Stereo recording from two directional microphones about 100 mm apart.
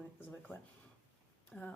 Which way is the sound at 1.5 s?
5° left (ahead or behind).